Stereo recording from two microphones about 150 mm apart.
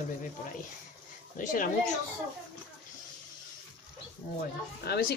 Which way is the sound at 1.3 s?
65° left (ahead or behind).